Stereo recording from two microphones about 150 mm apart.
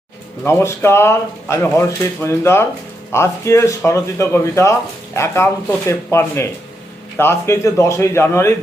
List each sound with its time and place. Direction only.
0.6 s speech: 15° left (ahead or behind)